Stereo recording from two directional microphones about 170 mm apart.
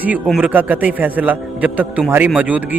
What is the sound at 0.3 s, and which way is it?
A man's voice, 5° right (ahead or behind).